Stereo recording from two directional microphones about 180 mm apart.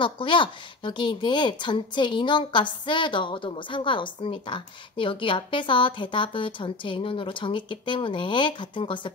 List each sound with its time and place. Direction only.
0.0 s speech: 25° left (ahead or behind)